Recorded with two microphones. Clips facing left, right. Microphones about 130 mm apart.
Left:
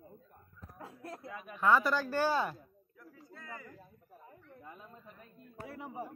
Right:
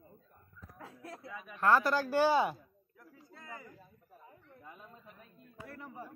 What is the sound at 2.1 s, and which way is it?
Speech, 15° right (ahead or behind).